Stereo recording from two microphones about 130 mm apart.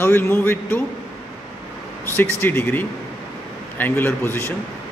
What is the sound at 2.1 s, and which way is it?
A man's voice, 15° left (ahead or behind).